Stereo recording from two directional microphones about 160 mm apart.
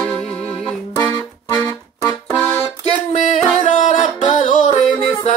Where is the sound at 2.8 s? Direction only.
50° left (ahead or behind).